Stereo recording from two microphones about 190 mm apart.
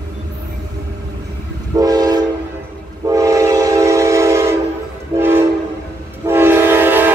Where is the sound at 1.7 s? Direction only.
20° right (ahead or behind).